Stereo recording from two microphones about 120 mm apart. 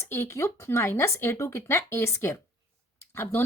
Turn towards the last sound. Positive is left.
turn(degrees=20)  # may be behind; listen again after turning